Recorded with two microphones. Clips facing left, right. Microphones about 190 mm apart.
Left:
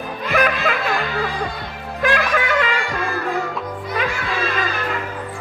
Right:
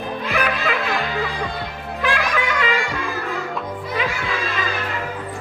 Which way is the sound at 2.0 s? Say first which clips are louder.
Left 3 dB; 50° left (ahead or behind).